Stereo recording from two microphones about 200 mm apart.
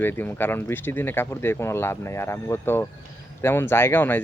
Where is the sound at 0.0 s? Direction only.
10° left (ahead or behind).